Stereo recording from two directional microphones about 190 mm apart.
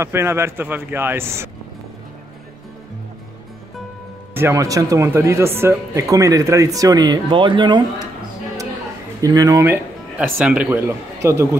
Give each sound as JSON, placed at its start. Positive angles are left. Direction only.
{"t": 0.0, "sound": "speech", "side_deg": -15}
{"t": 4.3, "sound": "speech", "side_deg": -15}
{"t": 9.2, "sound": "speech", "side_deg": -20}